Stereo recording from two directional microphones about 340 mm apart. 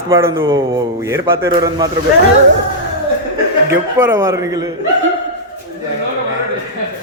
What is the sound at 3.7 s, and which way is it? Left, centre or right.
A man's voice, centre.